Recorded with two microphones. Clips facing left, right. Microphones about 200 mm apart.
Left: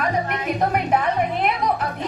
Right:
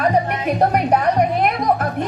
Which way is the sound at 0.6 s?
40° right (ahead or behind).